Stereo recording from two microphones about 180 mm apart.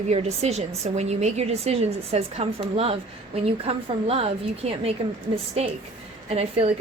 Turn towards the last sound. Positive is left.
turn(degrees=-35)  # may be behind; listen again after turning